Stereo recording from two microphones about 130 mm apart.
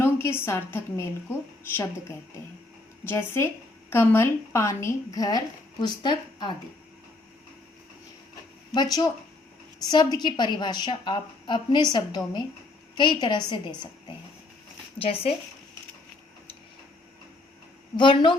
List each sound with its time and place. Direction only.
0.0 s a woman's voice: 20° left (ahead or behind); by 6.5 s 35° left (ahead or behind)
8.7 s a woman's voice: 30° left (ahead or behind)
14.9 s speech: 45° left (ahead or behind)
17.9 s a woman's voice: 40° left (ahead or behind)